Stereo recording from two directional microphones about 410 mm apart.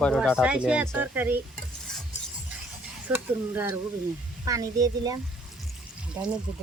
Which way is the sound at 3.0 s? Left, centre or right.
Centre.